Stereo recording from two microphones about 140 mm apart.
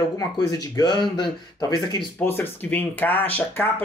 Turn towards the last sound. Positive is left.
turn(degrees=15)  # may be behind; listen again after turning